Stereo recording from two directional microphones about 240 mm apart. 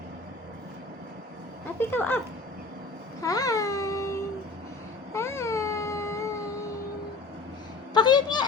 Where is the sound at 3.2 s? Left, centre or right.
Centre.